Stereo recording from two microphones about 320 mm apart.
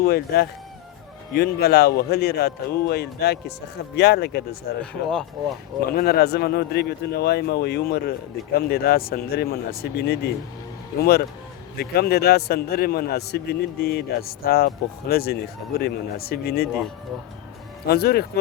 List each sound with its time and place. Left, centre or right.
0.0 s speech: left
4.8 s speech: centre
5.9 s speech: left
17.8 s speech: left